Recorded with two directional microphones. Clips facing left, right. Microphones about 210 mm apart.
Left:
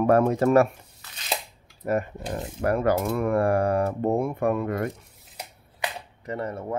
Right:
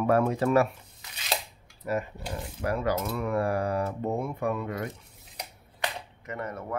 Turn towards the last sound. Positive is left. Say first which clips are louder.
# left 5 dB
turn(degrees=30)  # may be behind; listen again after turning